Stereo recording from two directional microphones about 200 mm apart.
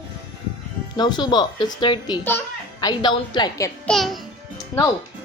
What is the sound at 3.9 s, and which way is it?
Speech, centre (ahead or behind).